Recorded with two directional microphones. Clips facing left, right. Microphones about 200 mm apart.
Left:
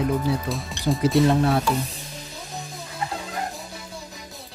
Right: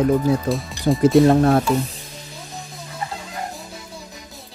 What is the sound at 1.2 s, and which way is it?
Speech, 50° right (ahead or behind).